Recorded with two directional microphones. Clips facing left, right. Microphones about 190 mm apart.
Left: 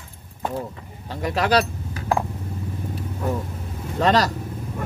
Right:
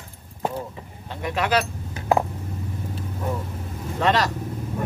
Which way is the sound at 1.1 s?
35° left (ahead or behind).